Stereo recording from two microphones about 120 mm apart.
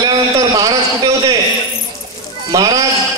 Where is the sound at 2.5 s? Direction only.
30° right (ahead or behind).